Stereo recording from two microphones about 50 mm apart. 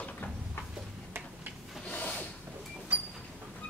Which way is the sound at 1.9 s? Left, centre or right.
Left.